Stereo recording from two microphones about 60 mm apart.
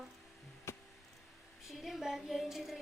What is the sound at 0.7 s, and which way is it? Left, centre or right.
Music, left.